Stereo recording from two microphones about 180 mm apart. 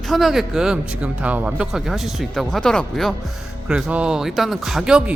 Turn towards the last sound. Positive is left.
turn(degrees=-5)  # may be behind; listen again after turning